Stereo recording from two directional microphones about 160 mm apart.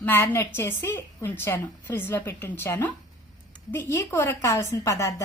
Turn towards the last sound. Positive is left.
turn(degrees=20)  # may be behind; listen again after turning